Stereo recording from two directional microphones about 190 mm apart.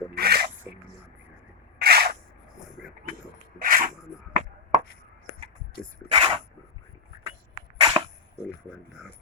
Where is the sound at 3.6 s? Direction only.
45° right (ahead or behind).